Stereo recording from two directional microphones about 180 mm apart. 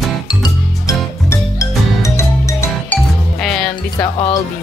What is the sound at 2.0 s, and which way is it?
Music, 15° left (ahead or behind).